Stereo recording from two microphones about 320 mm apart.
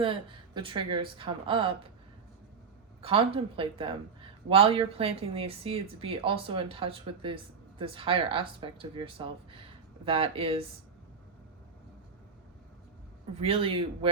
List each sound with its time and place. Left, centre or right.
0.0 s speech: centre
3.0 s speech: centre
13.4 s speech: centre